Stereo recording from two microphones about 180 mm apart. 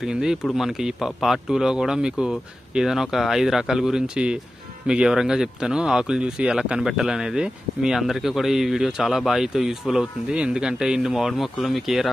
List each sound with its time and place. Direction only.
0.0 s speech: 5° right (ahead or behind)